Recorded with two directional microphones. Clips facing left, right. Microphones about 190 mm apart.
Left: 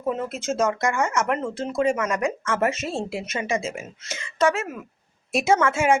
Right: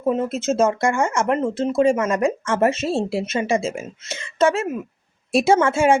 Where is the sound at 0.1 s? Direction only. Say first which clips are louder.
Right 6 dB; 25° right (ahead or behind).